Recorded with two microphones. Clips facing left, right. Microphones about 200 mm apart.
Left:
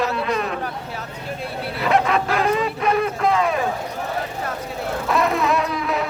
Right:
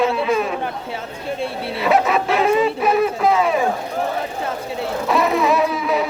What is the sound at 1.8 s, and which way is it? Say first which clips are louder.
Speech: right 2 dB; 5° right (ahead or behind).